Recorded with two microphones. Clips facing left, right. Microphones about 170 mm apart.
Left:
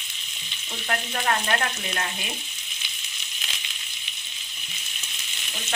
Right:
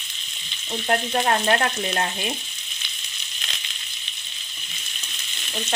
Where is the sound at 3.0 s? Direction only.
10° left (ahead or behind).